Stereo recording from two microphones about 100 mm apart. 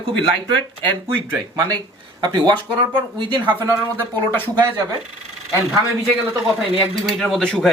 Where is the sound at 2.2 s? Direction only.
45° right (ahead or behind).